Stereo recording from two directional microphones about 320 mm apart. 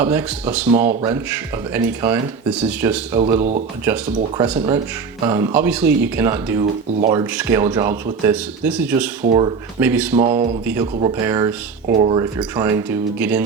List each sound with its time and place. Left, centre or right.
0.0 s speech: centre
0.7 s speech: right
1.7 s speech: centre
3.2 s speech: centre
9.2 s speech: right
9.8 s speech: centre